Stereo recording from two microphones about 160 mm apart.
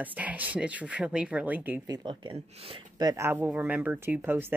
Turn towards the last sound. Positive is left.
turn(degrees=-15)  # may be behind; listen again after turning